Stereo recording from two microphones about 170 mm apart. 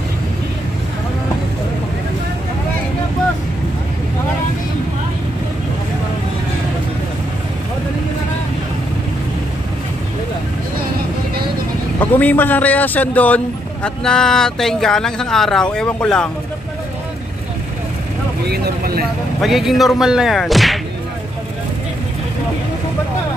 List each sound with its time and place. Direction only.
12.1 s a man's voice: 10° left (ahead or behind)
18.5 s speech: 60° right (ahead or behind)
19.4 s speech: centre (ahead or behind)